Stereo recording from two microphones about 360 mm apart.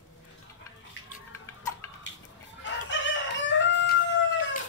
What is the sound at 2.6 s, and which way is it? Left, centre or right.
Chicken, left.